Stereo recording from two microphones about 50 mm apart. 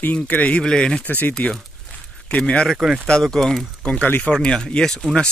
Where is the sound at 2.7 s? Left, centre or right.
Centre.